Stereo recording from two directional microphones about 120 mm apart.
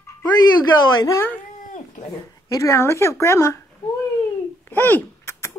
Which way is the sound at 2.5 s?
25° left (ahead or behind).